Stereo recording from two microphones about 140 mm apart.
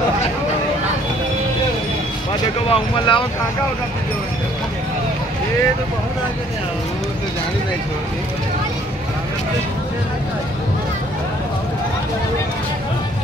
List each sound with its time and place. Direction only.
2.7 s speech: 35° left (ahead or behind)